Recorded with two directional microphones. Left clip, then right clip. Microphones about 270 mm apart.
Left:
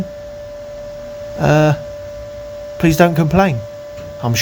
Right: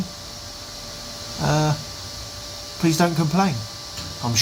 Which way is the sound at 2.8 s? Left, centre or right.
Left.